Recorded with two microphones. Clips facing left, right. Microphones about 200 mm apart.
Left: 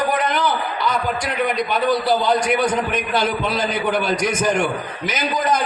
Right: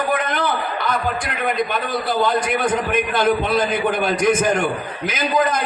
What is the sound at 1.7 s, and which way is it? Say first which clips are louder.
Speech: left 4 dB; 50° right (ahead or behind).